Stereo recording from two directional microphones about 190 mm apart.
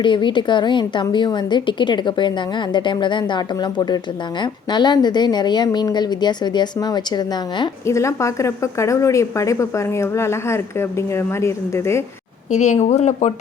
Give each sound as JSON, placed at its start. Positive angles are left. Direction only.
{"t": 0.0, "sound": "a woman's voice", "side_deg": 25}
{"t": 12.5, "sound": "speech", "side_deg": 40}